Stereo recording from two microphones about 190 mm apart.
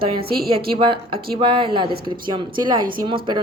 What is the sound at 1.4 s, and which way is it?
Speech, 25° right (ahead or behind).